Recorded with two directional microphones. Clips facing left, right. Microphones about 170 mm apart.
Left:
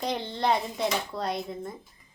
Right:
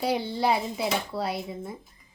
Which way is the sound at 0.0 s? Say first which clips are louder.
Right 3 dB; 10° right (ahead or behind).